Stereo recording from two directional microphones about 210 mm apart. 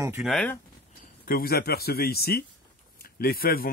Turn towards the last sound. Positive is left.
turn(degrees=45)  # may be behind; listen again after turning